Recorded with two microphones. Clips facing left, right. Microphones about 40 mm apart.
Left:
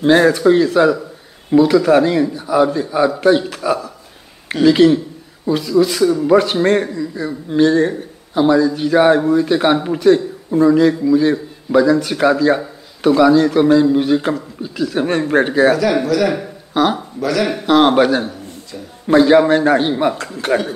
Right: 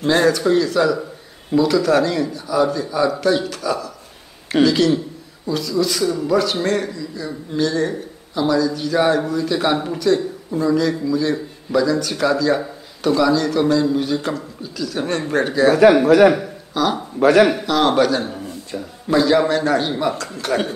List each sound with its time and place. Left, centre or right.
0.0 s a man's voice: left
16.1 s a man's voice: right
16.8 s a man's voice: left
17.2 s speech: right
17.6 s a man's voice: left